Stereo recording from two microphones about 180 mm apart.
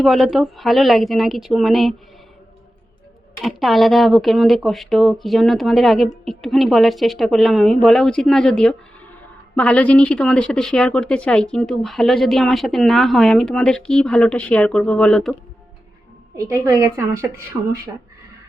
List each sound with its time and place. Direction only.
0.0 s speech: centre (ahead or behind)
3.4 s speech: centre (ahead or behind)
16.4 s a woman's voice: 15° right (ahead or behind)